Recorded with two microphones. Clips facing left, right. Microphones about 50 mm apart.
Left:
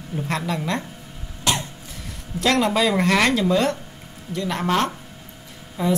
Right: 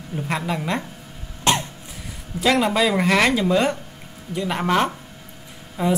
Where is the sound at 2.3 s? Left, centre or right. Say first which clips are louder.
Right 1 dB; centre.